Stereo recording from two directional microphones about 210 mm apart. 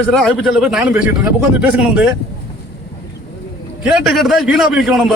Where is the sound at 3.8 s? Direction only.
Centre (ahead or behind).